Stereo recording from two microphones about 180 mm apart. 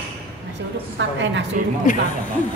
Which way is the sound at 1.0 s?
80° right.